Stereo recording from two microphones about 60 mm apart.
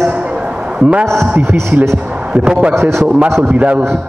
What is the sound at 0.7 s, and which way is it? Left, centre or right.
Speech, centre.